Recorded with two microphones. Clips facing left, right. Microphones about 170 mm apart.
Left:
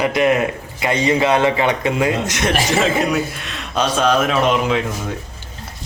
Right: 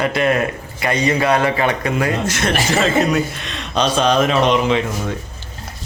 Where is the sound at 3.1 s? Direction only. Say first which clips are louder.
Right 1 dB; 5° left (ahead or behind).